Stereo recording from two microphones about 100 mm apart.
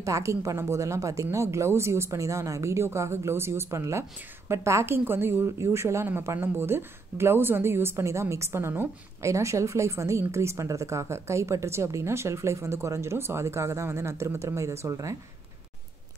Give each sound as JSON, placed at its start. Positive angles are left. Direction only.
{"t": 0.0, "sound": "a woman's voice", "side_deg": -30}